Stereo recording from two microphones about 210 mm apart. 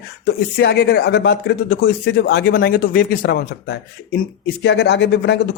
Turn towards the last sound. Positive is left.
turn(degrees=55)  # may be behind; listen again after turning